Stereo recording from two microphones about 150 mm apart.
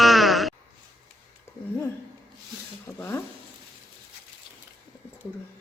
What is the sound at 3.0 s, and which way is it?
Speech, 15° left (ahead or behind).